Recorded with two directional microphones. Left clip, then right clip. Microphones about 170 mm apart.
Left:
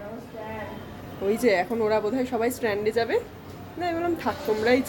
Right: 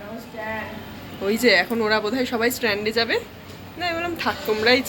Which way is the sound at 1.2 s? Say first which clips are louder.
Right 4 dB; 20° left (ahead or behind).